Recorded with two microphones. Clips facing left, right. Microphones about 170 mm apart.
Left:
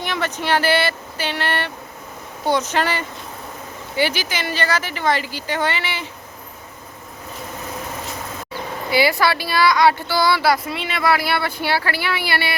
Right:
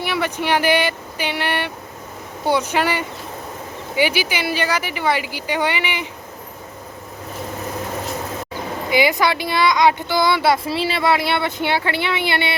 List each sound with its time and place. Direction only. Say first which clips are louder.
0.0 s speech: right 2 dB; 10° right (ahead or behind)
8.9 s speech: even; 20° right (ahead or behind)